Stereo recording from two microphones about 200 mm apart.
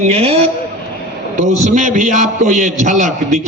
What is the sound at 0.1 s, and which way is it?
A man's voice, 30° right (ahead or behind).